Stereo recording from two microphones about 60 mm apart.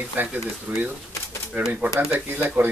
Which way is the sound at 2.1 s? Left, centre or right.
Right.